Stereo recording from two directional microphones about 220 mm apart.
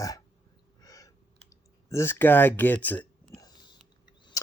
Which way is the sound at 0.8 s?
15° left (ahead or behind).